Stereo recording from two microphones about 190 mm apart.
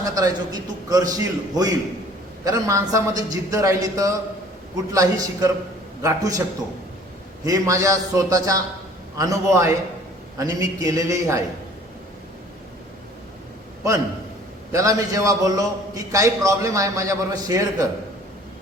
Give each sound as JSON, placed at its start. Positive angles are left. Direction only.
{"t": 0.0, "sound": "a man's voice", "side_deg": -20}
{"t": 7.4, "sound": "a man's voice", "side_deg": -15}
{"t": 14.7, "sound": "a man's voice", "side_deg": -15}